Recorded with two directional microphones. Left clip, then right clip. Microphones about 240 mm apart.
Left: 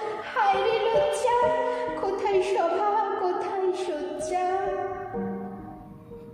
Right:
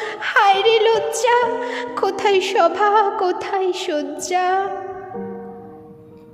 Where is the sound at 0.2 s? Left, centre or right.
Right.